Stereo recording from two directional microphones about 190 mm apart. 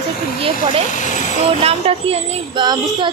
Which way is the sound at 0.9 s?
40° left (ahead or behind).